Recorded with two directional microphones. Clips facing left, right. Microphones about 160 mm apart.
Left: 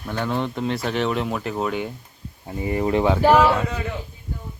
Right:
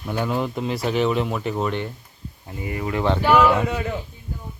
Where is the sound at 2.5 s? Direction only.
25° left (ahead or behind).